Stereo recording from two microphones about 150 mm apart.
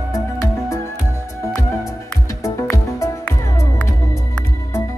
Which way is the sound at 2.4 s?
15° left (ahead or behind).